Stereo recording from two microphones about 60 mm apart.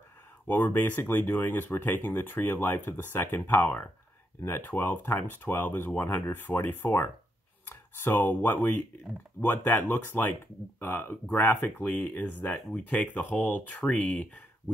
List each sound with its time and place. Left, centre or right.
0.5 s speech: left